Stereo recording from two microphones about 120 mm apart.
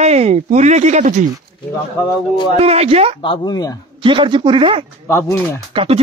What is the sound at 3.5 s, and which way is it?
Speech, 30° left (ahead or behind).